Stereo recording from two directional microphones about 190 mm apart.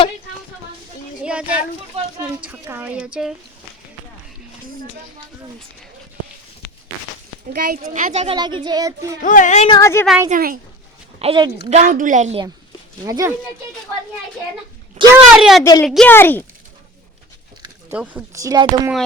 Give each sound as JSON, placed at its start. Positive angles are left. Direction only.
{"t": 1.2, "sound": "a sound", "side_deg": -5}
{"t": 2.1, "sound": "speech", "side_deg": -10}
{"t": 7.5, "sound": "speech", "side_deg": -50}
{"t": 8.4, "sound": "child singing", "side_deg": -25}
{"t": 9.2, "sound": "speech", "side_deg": 45}
{"t": 9.6, "sound": "speech", "side_deg": 20}
{"t": 10.2, "sound": "speech", "side_deg": -45}
{"t": 11.2, "sound": "child singing", "side_deg": -25}
{"t": 11.7, "sound": "a woman's voice", "side_deg": -40}
{"t": 13.1, "sound": "speech", "side_deg": -15}
{"t": 15.1, "sound": "speech", "side_deg": 0}
{"t": 17.9, "sound": "speech", "side_deg": -10}